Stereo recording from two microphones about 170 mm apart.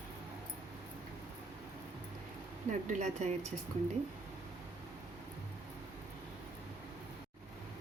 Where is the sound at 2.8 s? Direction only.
45° right (ahead or behind).